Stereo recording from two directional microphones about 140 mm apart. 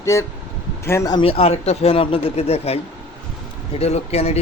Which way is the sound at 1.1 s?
40° left (ahead or behind).